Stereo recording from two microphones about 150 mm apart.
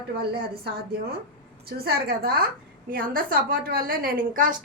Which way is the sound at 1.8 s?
90° right.